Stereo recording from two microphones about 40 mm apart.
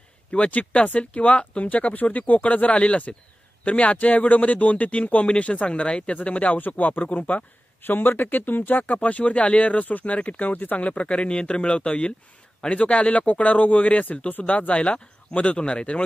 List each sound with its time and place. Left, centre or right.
0.3 s speech: left
6.6 s speech: left
7.8 s speech: left